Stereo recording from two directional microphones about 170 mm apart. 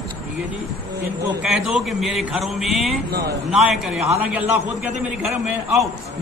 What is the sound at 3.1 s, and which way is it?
Speech, 70° right (ahead or behind).